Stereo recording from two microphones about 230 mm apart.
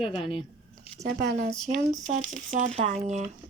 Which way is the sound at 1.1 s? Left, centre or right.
Right.